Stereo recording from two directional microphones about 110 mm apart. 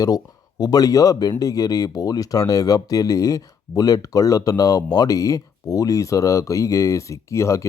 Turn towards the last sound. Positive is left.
turn(degrees=30)  # may be behind; listen again after turning